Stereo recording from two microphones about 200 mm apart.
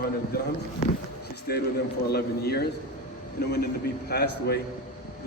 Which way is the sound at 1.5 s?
50° left (ahead or behind).